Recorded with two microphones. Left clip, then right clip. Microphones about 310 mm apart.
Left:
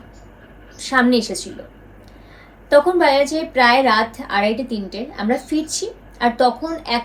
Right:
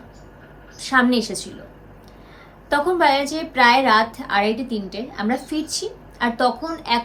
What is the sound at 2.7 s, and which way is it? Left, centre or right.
A woman's voice, centre.